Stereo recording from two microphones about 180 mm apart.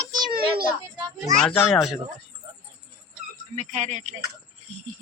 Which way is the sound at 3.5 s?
40° right (ahead or behind).